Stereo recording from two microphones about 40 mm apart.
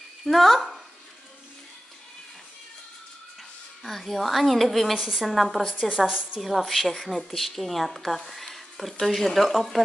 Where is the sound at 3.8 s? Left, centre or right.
Centre.